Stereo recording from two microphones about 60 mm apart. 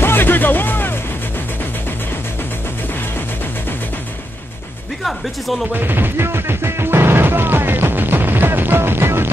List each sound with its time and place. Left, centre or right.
0.0 s music: left
5.0 s speech: centre
5.7 s music: right